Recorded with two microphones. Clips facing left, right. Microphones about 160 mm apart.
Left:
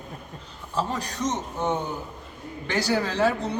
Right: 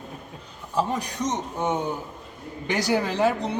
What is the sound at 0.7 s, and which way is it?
A man's voice, 10° right (ahead or behind).